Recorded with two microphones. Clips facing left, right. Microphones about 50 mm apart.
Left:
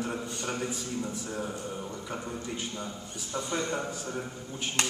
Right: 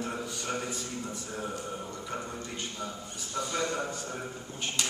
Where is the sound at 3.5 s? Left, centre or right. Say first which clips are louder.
Left 1 dB; left.